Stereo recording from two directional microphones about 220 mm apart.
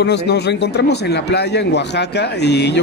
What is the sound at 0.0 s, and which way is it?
Speech, 50° left (ahead or behind).